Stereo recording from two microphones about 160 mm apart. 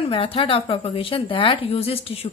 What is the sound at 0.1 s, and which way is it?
A woman's voice, 35° left (ahead or behind).